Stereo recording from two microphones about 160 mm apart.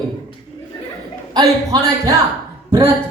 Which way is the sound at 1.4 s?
20° right (ahead or behind).